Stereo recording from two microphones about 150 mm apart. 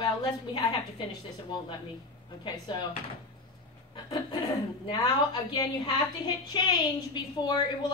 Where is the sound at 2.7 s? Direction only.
30° left (ahead or behind).